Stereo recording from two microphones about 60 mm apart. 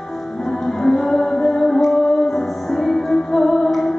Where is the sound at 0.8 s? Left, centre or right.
Centre.